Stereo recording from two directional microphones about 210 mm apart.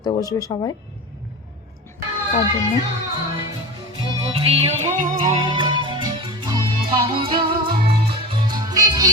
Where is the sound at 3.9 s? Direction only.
25° right (ahead or behind).